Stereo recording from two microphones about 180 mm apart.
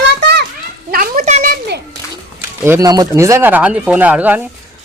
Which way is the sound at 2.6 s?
15° right (ahead or behind).